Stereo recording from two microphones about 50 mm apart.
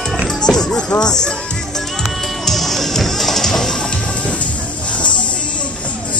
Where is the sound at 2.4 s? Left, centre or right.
Centre.